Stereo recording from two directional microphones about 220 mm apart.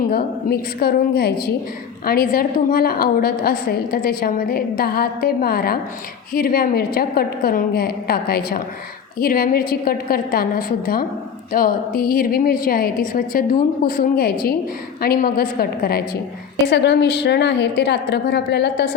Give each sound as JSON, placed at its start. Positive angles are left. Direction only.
{"t": 0.1, "sound": "a woman's voice", "side_deg": 45}